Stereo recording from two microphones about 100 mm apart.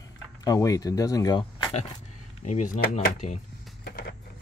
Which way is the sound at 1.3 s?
50° left (ahead or behind).